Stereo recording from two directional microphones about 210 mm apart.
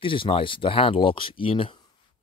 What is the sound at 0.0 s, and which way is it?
Speech, 25° left (ahead or behind).